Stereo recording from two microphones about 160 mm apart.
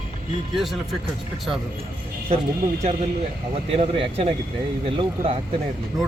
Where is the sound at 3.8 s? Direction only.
40° right (ahead or behind).